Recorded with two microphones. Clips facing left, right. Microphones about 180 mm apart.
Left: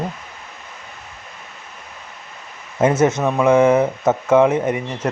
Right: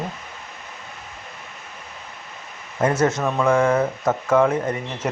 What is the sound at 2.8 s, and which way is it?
A man's voice, 20° left (ahead or behind).